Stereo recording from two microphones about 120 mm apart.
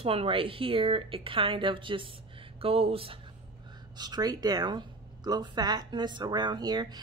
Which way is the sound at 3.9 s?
35° right (ahead or behind).